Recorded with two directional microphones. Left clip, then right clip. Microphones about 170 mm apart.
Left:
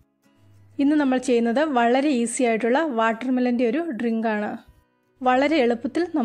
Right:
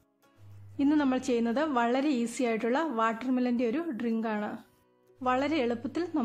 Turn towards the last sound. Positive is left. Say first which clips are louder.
# left 9 dB
turn(degrees=25)  # may be behind; listen again after turning